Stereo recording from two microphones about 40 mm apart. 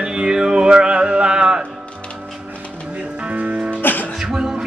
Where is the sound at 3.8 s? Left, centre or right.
Left.